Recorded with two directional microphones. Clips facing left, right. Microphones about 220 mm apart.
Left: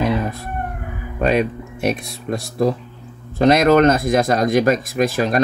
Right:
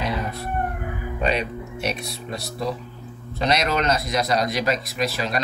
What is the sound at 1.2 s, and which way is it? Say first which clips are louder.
Speech: left 7 dB; 50° left (ahead or behind).